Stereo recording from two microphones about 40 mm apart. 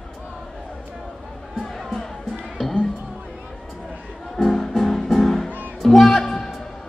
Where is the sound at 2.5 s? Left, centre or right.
Centre.